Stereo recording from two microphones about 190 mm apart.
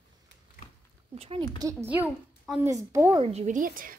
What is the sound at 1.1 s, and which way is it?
Speech, 30° right (ahead or behind).